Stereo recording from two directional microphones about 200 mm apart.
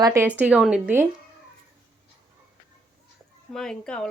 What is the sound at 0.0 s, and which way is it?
A woman's voice, 15° right (ahead or behind).